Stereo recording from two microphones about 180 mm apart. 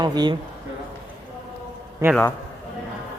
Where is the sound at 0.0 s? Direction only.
25° right (ahead or behind).